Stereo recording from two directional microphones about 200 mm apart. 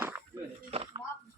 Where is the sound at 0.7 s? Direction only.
30° right (ahead or behind).